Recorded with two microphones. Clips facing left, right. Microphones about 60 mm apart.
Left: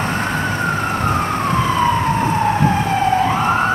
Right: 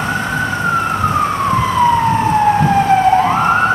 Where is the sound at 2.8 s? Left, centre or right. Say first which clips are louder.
Right 5 dB; right.